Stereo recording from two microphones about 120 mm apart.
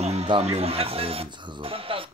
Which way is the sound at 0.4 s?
60° right (ahead or behind).